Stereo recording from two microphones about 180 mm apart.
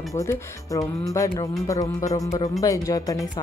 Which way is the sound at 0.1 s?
15° left (ahead or behind).